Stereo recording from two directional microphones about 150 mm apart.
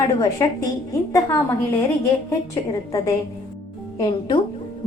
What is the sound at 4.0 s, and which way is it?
Speech, 35° left (ahead or behind).